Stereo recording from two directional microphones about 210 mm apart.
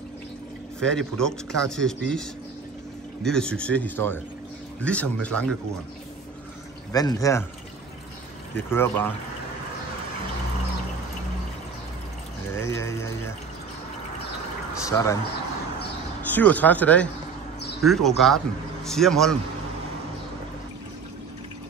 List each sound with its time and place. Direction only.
0.7 s speech: 5° left (ahead or behind)
6.9 s speech: 15° left (ahead or behind)
8.5 s speech: 10° left (ahead or behind)
12.5 s speech: 15° left (ahead or behind)
14.9 s speech: 15° left (ahead or behind)
16.3 s speech: 10° left (ahead or behind)